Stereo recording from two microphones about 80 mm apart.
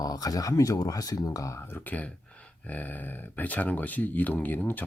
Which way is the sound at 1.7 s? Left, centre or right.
Left.